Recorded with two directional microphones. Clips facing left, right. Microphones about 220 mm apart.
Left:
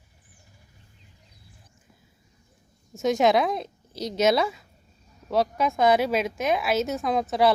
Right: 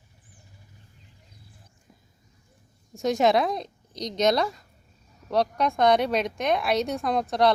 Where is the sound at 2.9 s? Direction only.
Centre (ahead or behind).